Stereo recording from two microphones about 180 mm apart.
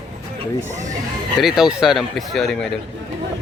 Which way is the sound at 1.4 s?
Centre (ahead or behind).